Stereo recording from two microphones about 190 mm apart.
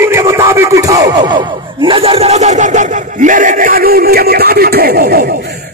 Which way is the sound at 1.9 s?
30° right (ahead or behind).